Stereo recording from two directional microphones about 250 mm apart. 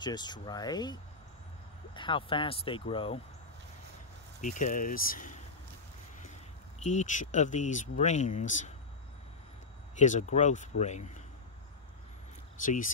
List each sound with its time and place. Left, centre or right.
0.0 s speech: centre
2.0 s speech: centre
4.4 s speech: left
6.8 s speech: left
9.9 s speech: left